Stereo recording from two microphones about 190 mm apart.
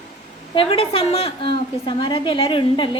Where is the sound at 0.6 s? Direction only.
30° left (ahead or behind).